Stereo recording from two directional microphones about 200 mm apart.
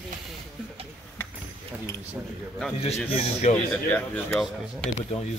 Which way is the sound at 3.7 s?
10° left (ahead or behind).